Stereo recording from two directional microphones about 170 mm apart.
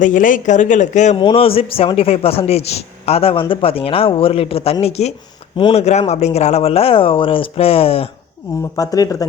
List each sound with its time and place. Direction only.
0.0 s speech: 50° left (ahead or behind)
1.1 s speech: 30° left (ahead or behind)
8.7 s speech: 20° left (ahead or behind)